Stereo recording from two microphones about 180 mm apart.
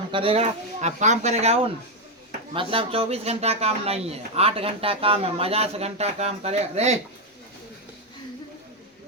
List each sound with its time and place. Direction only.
0.1 s speech: 30° right (ahead or behind)